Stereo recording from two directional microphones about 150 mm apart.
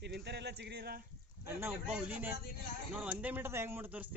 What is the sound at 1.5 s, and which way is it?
Speech, 15° right (ahead or behind).